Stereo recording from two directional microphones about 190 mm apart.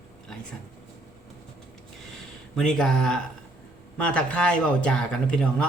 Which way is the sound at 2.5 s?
5° left (ahead or behind).